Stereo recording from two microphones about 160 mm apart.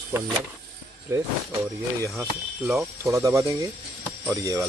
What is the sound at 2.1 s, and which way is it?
Speech, 5° right (ahead or behind).